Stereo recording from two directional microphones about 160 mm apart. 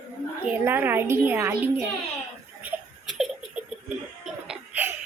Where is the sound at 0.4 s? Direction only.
10° right (ahead or behind).